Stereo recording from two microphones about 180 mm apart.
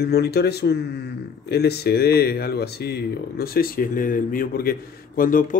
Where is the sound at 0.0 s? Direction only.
65° left (ahead or behind).